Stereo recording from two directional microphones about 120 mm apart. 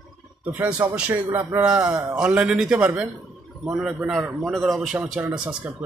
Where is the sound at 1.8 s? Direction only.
30° right (ahead or behind).